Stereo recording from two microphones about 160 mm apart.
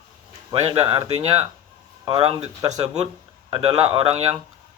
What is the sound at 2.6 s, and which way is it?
Speech, 25° right (ahead or behind).